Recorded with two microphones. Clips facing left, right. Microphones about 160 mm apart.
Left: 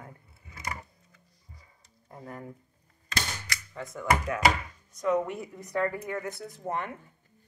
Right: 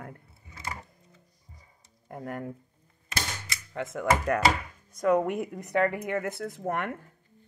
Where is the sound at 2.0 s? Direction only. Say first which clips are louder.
Right 6 dB; 70° right (ahead or behind).